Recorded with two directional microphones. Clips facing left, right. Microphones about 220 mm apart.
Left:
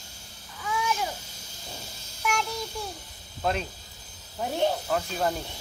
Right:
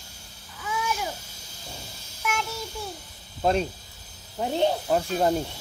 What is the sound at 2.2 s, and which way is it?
Child singing, centre (ahead or behind).